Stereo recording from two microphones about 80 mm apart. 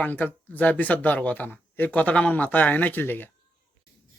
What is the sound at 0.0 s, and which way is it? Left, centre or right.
Speech, left.